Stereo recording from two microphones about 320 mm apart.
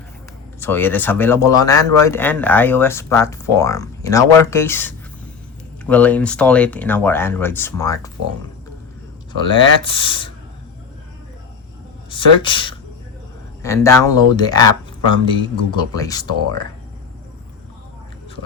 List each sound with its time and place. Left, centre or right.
0.6 s speech: centre
9.5 s speech: centre
12.1 s speech: centre